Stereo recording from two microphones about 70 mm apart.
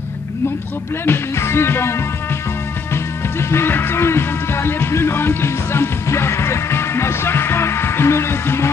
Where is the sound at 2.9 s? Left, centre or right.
Left.